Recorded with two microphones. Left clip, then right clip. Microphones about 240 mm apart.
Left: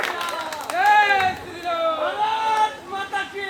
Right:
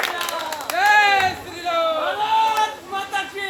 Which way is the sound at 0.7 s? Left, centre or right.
Right.